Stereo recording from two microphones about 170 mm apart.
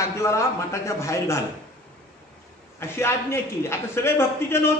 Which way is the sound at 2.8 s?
15° left (ahead or behind).